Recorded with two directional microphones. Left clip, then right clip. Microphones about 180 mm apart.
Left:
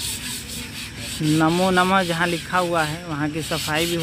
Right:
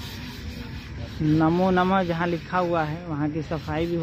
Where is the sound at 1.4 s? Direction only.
5° left (ahead or behind).